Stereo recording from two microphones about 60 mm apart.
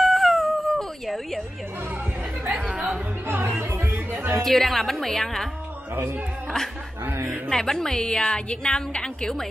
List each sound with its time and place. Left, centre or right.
0.0 s howl: centre
2.7 s music: centre
3.3 s music: right
4.4 s speech: centre
5.9 s speech: right
7.4 s a woman's voice: centre